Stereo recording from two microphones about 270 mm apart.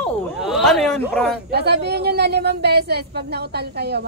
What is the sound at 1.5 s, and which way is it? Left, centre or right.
A woman's voice, right.